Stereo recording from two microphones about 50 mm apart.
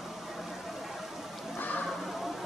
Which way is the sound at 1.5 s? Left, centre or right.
Left.